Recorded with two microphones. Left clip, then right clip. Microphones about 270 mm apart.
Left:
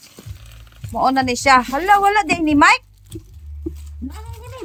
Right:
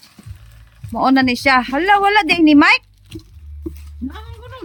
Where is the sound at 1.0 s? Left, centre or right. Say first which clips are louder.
Right 2 dB; right.